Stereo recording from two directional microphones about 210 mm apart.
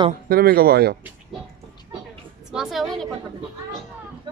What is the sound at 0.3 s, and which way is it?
Speech, 45° right (ahead or behind).